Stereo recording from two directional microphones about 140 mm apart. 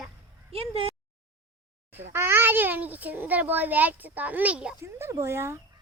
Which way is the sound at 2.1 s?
15° right (ahead or behind).